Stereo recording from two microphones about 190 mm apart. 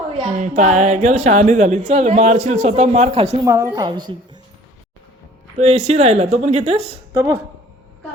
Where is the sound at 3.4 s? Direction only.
15° right (ahead or behind).